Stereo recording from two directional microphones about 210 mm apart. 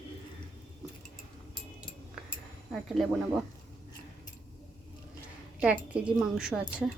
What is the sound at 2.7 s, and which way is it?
Speech, centre (ahead or behind).